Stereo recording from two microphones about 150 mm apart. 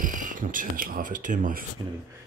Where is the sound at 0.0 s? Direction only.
60° right (ahead or behind).